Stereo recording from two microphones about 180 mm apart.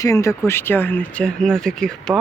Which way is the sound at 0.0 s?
15° left (ahead or behind).